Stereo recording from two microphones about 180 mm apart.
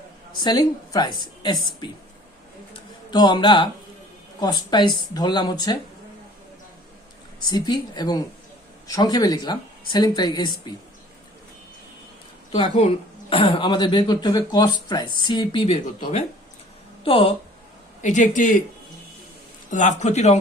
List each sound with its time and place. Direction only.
0.4 s speech: 25° left (ahead or behind)
2.7 s a sound: 25° left (ahead or behind)
4.4 s speech: 25° left (ahead or behind)
7.5 s speech: 25° left (ahead or behind)
12.5 s speech: 30° left (ahead or behind)
18.0 s speech: 45° left (ahead or behind)
19.7 s speech: 40° left (ahead or behind)